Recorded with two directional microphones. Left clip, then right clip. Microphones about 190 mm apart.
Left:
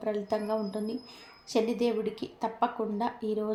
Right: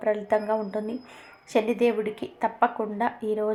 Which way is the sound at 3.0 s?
35° right (ahead or behind).